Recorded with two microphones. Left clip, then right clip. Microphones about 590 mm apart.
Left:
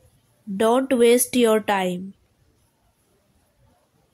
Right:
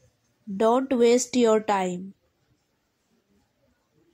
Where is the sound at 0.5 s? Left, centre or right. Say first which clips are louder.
Left 3 dB; left.